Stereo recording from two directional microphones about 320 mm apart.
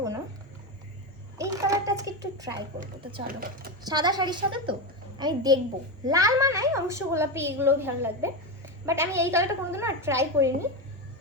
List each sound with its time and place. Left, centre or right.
1.4 s a sound: centre
2.8 s a woman's voice: centre
3.2 s speech: right
3.8 s a woman's voice: centre